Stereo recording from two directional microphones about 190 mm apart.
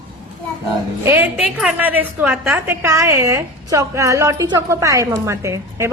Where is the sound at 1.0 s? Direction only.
10° right (ahead or behind).